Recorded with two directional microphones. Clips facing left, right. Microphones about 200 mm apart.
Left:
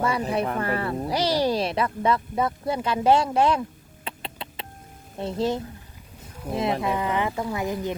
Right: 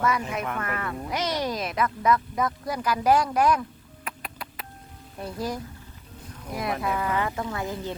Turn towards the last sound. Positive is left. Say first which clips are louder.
# left 4 dB
turn(degrees=15)  # may be behind; listen again after turning